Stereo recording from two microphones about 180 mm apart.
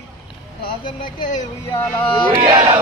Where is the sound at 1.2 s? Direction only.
45° left (ahead or behind).